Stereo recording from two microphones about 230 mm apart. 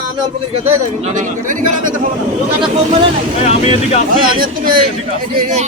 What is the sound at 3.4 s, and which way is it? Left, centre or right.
Speech, left.